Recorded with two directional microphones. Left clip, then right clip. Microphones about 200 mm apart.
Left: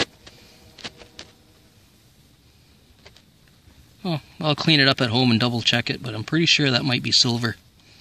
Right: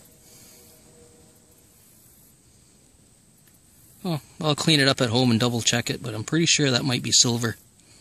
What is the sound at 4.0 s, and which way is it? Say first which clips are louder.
Speech: left 2 dB; 10° right (ahead or behind).